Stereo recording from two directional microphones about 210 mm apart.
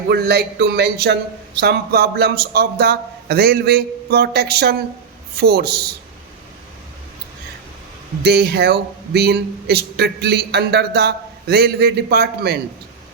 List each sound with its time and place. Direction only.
0.1 s speech: 50° right (ahead or behind)
8.2 s speech: 50° right (ahead or behind)